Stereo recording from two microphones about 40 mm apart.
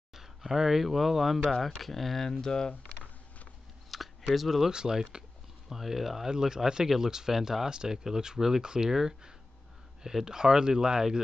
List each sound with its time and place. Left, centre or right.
0.5 s speech: centre
2.4 s speech: centre
3.9 s a sound: centre
4.6 s speech: centre
5.7 s speech: centre